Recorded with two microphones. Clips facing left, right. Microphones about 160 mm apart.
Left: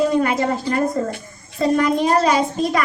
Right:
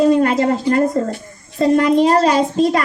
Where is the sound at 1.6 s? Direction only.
30° right (ahead or behind).